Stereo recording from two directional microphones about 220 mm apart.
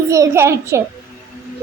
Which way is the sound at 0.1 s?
10° right (ahead or behind).